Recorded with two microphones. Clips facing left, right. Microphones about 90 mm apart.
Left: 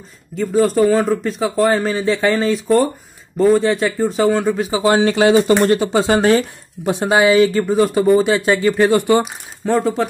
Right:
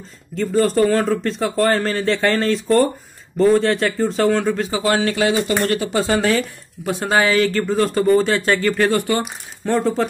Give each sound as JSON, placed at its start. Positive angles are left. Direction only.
{"t": 0.4, "sound": "speech", "side_deg": 5}
{"t": 9.2, "sound": "speech", "side_deg": 0}